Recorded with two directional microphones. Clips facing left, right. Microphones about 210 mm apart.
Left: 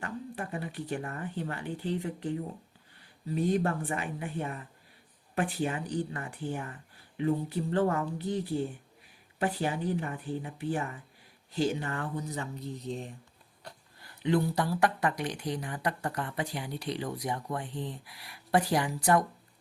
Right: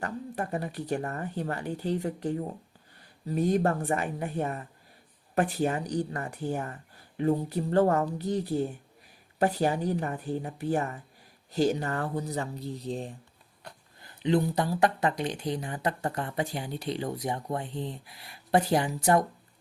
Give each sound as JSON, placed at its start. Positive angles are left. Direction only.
{"t": 0.0, "sound": "speech", "side_deg": -40}
{"t": 14.0, "sound": "speech", "side_deg": -25}